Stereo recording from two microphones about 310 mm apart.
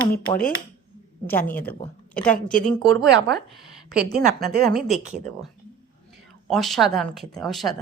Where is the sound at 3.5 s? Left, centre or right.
Centre.